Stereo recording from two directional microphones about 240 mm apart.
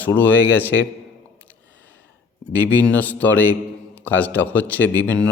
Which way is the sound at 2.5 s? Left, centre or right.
Centre.